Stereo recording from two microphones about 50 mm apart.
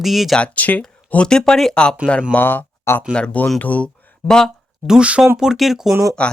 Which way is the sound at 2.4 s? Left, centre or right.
Left.